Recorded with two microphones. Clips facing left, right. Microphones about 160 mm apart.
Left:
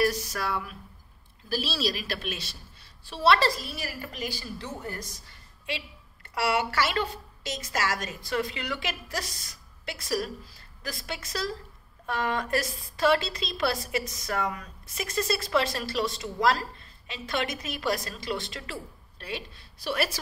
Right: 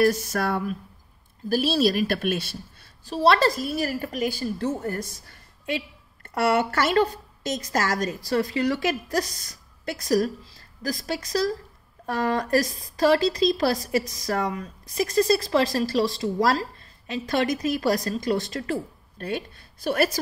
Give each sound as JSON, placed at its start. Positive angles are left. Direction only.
{"t": 0.0, "sound": "a woman's voice", "side_deg": -50}
{"t": 3.2, "sound": "a woman's voice", "side_deg": -45}